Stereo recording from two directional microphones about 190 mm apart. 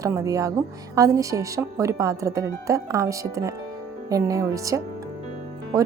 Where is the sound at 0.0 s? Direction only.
15° right (ahead or behind).